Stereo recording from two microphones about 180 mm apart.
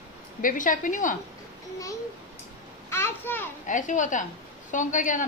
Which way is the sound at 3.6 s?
45° left (ahead or behind).